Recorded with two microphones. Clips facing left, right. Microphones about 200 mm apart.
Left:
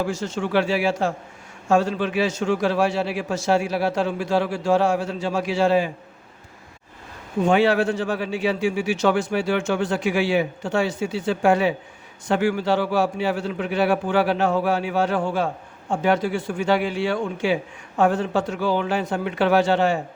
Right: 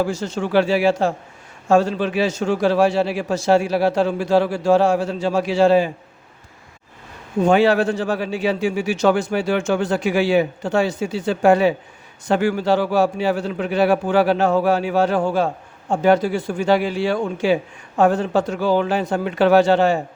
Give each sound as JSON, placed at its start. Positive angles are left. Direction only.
{"t": 0.1, "sound": "a man's voice", "side_deg": -35}
{"t": 7.4, "sound": "a man's voice", "side_deg": -40}